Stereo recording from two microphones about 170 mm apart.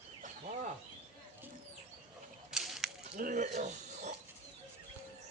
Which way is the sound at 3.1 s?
50° right (ahead or behind).